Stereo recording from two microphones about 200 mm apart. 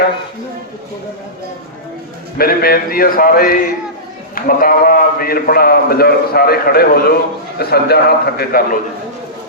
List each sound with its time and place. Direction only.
2.4 s a man's voice: 50° left (ahead or behind)